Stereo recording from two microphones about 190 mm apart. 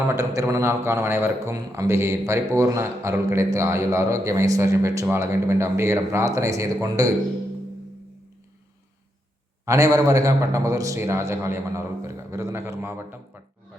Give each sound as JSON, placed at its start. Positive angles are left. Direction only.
{"t": 0.1, "sound": "a man's voice", "side_deg": -15}
{"t": 9.6, "sound": "a man's voice", "side_deg": -15}